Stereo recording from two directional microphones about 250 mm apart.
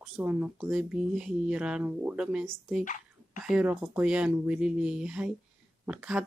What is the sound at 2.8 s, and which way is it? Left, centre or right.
Dog, left.